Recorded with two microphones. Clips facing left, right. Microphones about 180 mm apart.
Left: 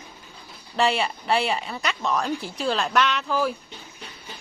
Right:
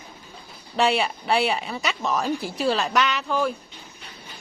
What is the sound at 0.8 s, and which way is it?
A woman's voice, centre (ahead or behind).